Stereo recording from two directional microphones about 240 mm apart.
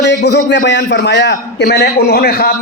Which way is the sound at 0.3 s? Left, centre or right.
Left.